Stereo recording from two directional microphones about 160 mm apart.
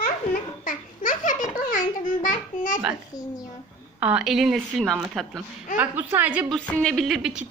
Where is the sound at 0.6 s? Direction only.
55° left (ahead or behind).